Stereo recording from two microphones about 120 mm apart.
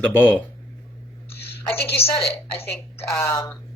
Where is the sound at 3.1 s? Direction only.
25° left (ahead or behind).